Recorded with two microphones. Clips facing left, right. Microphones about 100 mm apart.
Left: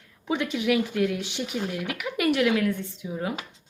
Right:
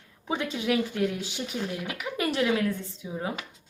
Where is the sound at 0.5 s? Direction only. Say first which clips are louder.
Left 3 dB; 35° right (ahead or behind).